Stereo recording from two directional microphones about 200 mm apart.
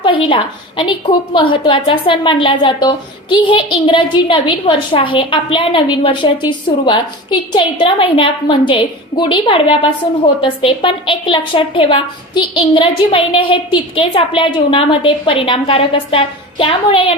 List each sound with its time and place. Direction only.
0.0 s a woman's voice: 25° left (ahead or behind)